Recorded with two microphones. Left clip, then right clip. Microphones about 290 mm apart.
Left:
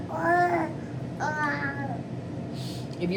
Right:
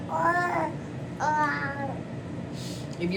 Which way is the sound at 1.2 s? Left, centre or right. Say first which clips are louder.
Right 3 dB; centre.